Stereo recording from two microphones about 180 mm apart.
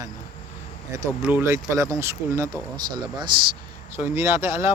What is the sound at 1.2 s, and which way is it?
Speech, 10° right (ahead or behind).